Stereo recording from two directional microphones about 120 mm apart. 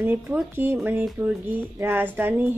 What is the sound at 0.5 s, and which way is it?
Speech, 15° right (ahead or behind).